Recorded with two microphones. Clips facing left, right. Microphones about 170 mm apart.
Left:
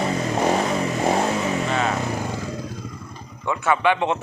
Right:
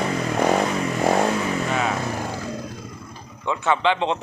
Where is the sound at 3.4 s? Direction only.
20° right (ahead or behind).